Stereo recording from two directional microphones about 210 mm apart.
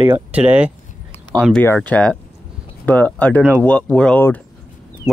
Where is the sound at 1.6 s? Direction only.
10° left (ahead or behind).